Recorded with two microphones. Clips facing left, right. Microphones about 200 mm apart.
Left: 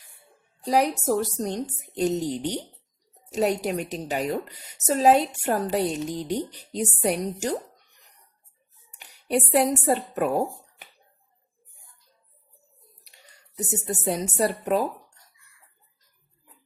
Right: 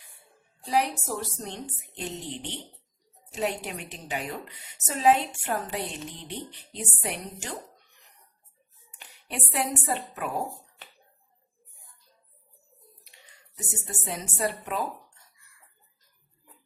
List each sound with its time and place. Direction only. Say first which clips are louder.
0.6 s a woman's voice: left 5 dB; 40° left (ahead or behind)
9.2 s a woman's voice: left 10 dB; 40° left (ahead or behind)
14.0 s a woman's voice: left 5 dB; 40° left (ahead or behind)